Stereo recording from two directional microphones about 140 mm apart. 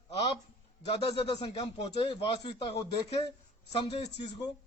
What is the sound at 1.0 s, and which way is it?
A man's voice, 45° left (ahead or behind).